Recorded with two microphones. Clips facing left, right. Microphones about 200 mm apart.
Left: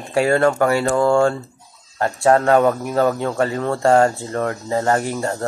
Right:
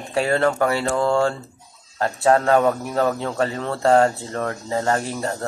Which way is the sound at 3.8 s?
30° left (ahead or behind).